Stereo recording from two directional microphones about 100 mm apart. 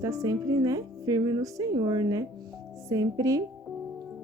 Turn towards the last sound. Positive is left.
turn(degrees=-35)  # may be behind; listen again after turning